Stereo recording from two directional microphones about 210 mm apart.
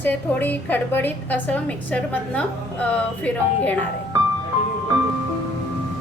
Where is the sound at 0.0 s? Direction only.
10° left (ahead or behind).